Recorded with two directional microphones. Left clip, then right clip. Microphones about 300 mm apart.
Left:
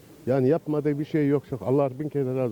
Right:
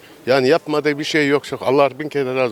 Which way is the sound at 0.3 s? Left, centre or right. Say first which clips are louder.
Right 8 dB; centre.